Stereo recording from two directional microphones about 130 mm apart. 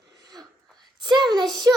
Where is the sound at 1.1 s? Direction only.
35° right (ahead or behind).